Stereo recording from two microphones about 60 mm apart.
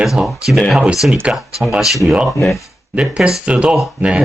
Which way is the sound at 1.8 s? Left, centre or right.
Centre.